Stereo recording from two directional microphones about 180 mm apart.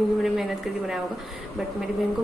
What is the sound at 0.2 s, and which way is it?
Speech, centre (ahead or behind).